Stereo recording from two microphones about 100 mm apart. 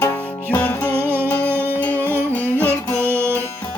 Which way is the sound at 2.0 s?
25° right (ahead or behind).